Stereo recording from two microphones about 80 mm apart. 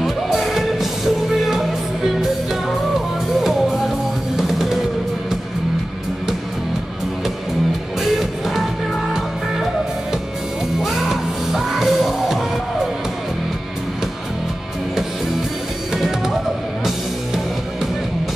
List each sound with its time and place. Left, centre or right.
0.0 s music: centre
3.3 s music: centre
10.8 s music: centre